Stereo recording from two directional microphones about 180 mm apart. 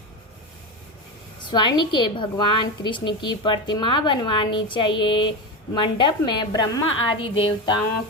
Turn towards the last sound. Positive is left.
turn(degrees=25)  # may be behind; listen again after turning